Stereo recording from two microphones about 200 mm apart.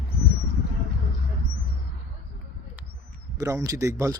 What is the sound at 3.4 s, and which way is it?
Speech, 15° right (ahead or behind).